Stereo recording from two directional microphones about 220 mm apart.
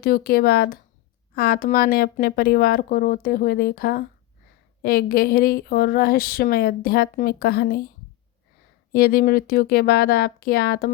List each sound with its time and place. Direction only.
0.0 s speech: 45° left (ahead or behind)
8.9 s speech: 45° left (ahead or behind)